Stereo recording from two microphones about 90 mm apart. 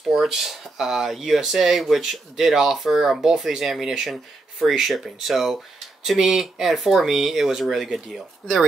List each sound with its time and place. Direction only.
0.1 s speech: 5° right (ahead or behind)